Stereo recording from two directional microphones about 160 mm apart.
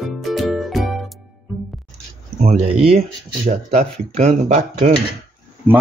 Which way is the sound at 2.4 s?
40° right (ahead or behind).